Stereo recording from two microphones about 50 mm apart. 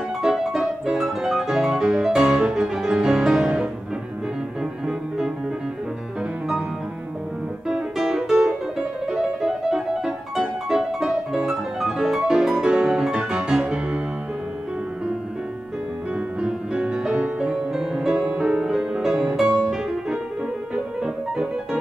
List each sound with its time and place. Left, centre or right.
0.2 s music: centre
7.6 s music: centre
16.3 s music: right
18.1 s music: centre